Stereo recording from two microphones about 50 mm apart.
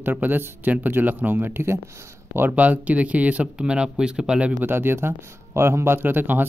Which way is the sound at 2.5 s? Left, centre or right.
Right.